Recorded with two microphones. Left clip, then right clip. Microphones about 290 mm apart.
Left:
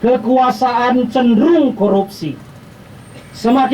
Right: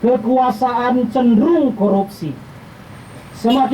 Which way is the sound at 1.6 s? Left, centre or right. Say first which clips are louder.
Left 2 dB; right.